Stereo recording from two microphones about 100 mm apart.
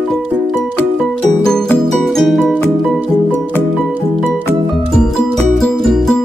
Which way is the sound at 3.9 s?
20° right (ahead or behind).